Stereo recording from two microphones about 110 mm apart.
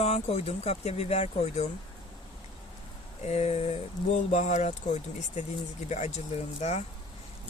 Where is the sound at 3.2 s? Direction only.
90° left.